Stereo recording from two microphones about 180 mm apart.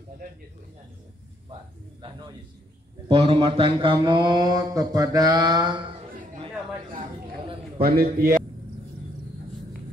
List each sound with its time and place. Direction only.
2.0 s speech: 25° right (ahead or behind)
3.1 s speech: 35° right (ahead or behind)
7.8 s a man's voice: 60° right (ahead or behind)